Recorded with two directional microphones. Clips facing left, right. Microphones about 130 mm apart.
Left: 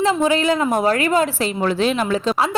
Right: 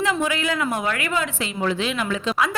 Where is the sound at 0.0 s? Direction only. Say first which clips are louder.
Left 6 dB; 30° left (ahead or behind).